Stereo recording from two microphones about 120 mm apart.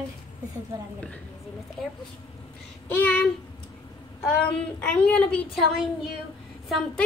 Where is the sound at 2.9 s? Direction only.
10° left (ahead or behind).